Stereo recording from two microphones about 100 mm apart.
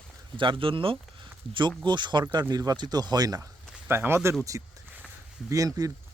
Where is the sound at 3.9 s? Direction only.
20° right (ahead or behind).